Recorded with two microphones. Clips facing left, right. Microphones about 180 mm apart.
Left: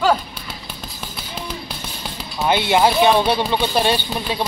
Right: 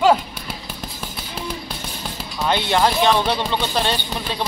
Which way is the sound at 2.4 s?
10° left (ahead or behind).